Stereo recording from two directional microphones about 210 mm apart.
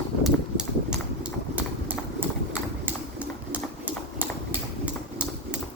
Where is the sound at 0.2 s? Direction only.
Centre (ahead or behind).